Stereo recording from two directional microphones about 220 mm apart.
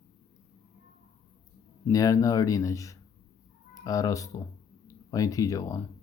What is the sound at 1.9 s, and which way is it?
Speech, 15° left (ahead or behind).